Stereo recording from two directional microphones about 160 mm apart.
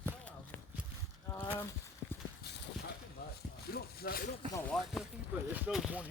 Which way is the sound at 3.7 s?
70° left (ahead or behind).